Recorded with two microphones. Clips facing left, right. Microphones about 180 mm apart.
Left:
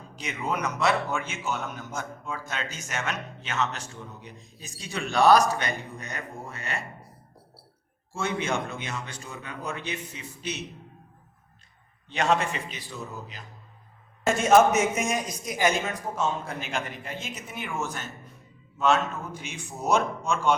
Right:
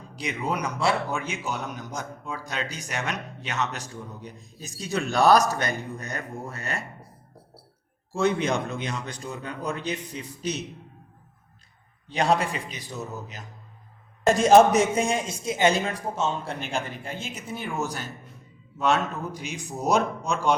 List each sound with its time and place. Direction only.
0.2 s speech: 35° right (ahead or behind)
4.9 s speech: 10° left (ahead or behind)
5.5 s speech: 40° right (ahead or behind)
8.2 s speech: 35° right (ahead or behind)
12.1 s speech: 35° right (ahead or behind)
12.7 s music: 20° right (ahead or behind)
14.3 s speech: 35° right (ahead or behind)